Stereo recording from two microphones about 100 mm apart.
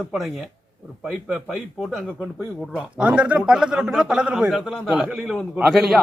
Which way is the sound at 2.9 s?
10° right (ahead or behind).